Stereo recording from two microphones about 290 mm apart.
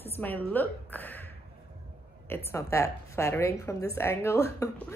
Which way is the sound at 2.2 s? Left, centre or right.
Centre.